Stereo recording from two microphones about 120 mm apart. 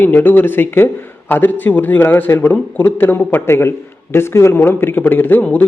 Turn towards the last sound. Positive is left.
turn(degrees=15)  # may be behind; listen again after turning